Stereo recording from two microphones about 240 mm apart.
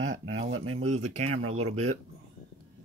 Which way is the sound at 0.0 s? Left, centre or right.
Right.